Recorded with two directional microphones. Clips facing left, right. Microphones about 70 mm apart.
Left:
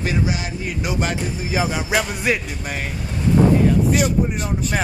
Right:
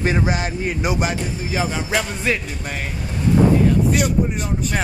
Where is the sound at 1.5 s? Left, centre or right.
Centre.